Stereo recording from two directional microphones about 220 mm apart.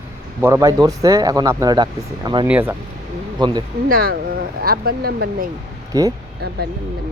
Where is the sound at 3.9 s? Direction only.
40° right (ahead or behind).